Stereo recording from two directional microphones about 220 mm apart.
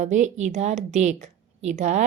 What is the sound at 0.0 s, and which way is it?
A woman's voice, 35° right (ahead or behind).